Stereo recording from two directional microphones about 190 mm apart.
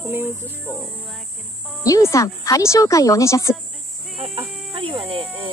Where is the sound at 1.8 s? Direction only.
15° left (ahead or behind).